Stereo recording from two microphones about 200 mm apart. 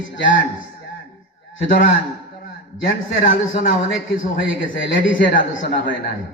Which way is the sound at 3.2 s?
45° left (ahead or behind).